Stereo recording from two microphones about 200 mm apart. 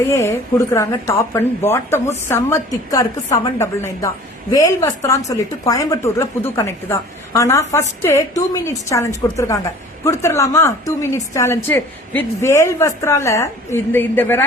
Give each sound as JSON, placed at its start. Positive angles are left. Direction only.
{"t": 0.1, "sound": "a woman's voice", "side_deg": 15}